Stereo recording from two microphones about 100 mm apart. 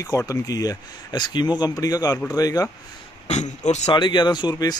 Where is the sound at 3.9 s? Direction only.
50° left (ahead or behind).